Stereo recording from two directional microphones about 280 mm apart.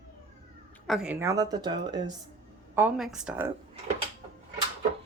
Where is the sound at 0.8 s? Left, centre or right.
Centre.